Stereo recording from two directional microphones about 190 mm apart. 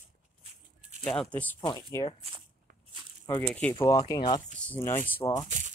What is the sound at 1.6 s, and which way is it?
Speech, 20° left (ahead or behind).